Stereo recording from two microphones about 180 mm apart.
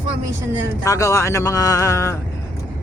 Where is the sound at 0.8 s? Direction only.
15° left (ahead or behind).